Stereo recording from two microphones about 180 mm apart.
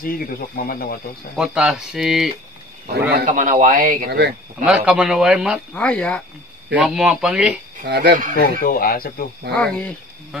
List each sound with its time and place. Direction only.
0.0 s speech: 55° left (ahead or behind)
1.3 s speech: 5° right (ahead or behind)
3.3 s speech: 45° right (ahead or behind)
4.6 s speech: 5° right (ahead or behind)
6.7 s speech: 5° right (ahead or behind)
7.8 s speech: 70° right (ahead or behind)
8.4 s speech: 55° left (ahead or behind)
9.5 s speech: 5° left (ahead or behind)